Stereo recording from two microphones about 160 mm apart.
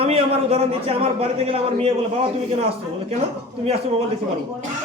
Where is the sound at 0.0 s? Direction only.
40° right (ahead or behind).